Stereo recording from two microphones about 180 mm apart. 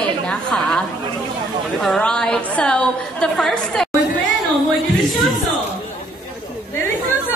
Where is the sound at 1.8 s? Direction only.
5° left (ahead or behind).